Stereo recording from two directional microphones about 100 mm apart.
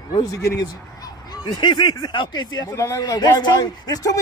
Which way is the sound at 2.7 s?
30° left (ahead or behind).